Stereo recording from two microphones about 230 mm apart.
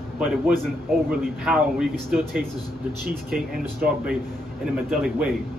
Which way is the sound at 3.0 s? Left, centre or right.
Right.